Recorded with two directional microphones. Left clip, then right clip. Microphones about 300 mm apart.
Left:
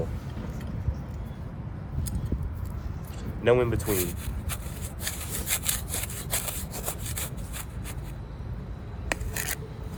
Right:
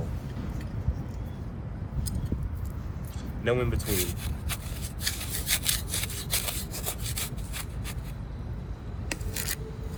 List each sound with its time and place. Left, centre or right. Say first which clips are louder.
3.4 s speech: left 6 dB; left
3.8 s speech: left 2 dB; centre
5.0 s sawing: right 3 dB; centre
9.0 s rub: left 3 dB; centre